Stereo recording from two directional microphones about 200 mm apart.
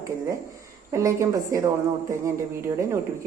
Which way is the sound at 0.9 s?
15° right (ahead or behind).